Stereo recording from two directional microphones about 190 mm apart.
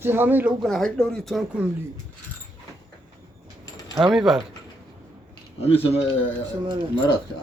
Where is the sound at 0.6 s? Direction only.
Centre (ahead or behind).